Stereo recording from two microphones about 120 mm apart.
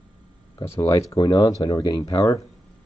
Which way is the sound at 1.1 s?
40° left (ahead or behind).